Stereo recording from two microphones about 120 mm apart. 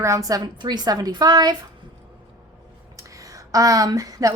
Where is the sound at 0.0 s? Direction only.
30° right (ahead or behind).